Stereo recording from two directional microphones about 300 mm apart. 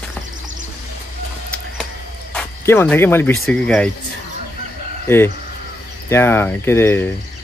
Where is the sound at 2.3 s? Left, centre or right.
Centre.